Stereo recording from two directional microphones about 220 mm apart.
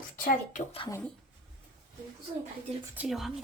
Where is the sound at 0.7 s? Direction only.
25° left (ahead or behind).